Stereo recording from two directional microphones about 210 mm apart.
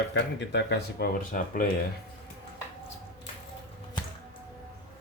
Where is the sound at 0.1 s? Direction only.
55° left (ahead or behind).